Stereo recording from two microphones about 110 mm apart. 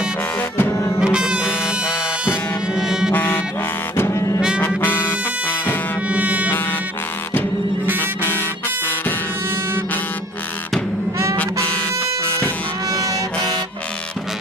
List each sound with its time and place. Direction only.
0.3 s music: 15° left (ahead or behind)
0.7 s music: 30° left (ahead or behind)
1.0 s music: 10° right (ahead or behind)
3.1 s music: 20° left (ahead or behind)
4.4 s brass instrument: 10° right (ahead or behind)
4.6 s music: 20° left (ahead or behind)
6.1 s music: 15° right (ahead or behind)
8.2 s music: 20° left (ahead or behind)
12.9 s harmonica: 30° right (ahead or behind)